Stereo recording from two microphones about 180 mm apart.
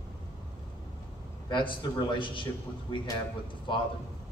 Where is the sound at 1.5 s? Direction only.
25° left (ahead or behind).